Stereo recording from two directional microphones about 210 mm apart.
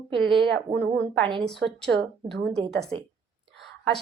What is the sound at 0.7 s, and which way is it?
Speech, 25° right (ahead or behind).